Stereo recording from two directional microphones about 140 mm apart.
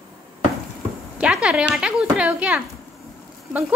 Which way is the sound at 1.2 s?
5° right (ahead or behind).